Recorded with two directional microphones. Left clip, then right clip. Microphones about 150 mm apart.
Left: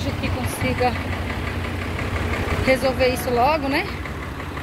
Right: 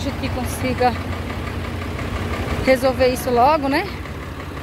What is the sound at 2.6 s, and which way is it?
Speech, 40° right (ahead or behind).